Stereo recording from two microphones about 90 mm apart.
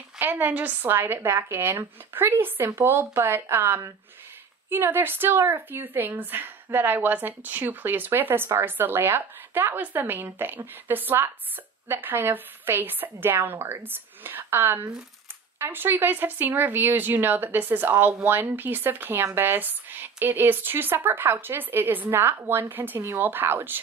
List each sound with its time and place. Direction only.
0.2 s speech: 20° right (ahead or behind)